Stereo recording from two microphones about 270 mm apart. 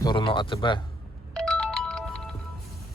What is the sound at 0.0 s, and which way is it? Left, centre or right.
Speech, centre.